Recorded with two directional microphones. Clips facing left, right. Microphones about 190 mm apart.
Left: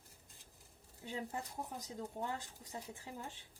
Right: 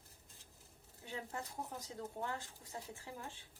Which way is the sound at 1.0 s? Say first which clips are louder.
Left 2 dB; 15° left (ahead or behind).